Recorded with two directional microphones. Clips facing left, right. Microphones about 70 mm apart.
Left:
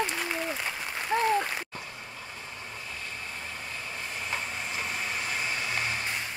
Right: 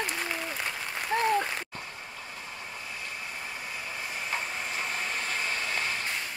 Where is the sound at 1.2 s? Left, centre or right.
Centre.